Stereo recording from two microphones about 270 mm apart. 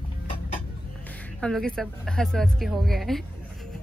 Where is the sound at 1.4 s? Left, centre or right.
Centre.